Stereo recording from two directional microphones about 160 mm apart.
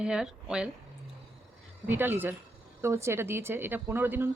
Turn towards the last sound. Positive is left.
turn(degrees=-15)  # may be behind; listen again after turning